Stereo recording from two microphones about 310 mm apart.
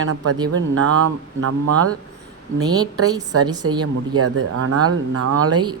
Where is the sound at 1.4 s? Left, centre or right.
Right.